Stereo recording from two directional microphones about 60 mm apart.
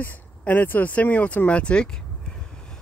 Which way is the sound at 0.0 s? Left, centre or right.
Left.